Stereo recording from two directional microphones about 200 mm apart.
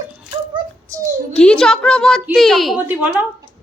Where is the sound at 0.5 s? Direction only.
15° right (ahead or behind).